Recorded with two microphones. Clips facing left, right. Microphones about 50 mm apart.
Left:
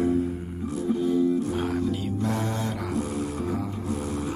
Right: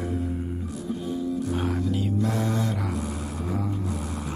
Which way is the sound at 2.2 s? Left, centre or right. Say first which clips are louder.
Left 1 dB; centre.